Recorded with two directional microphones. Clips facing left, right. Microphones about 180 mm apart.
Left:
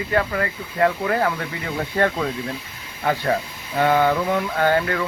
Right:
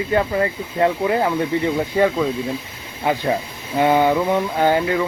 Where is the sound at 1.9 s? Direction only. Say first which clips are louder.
Right 1 dB; 10° right (ahead or behind).